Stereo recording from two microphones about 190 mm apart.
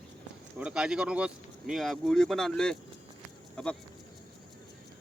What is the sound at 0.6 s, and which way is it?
Speech, 5° right (ahead or behind).